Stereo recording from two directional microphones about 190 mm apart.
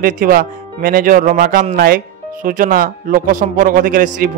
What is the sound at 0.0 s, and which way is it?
A man's voice, 50° right (ahead or behind).